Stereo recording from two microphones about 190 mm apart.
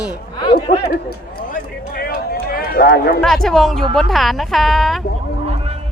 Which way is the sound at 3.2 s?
Centre (ahead or behind).